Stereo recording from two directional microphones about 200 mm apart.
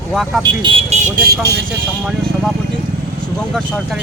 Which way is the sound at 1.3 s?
55° right (ahead or behind).